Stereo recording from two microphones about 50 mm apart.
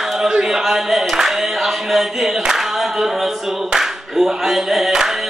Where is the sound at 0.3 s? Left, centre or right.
Centre.